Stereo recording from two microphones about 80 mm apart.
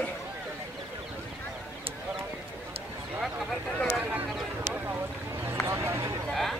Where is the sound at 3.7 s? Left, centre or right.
Centre.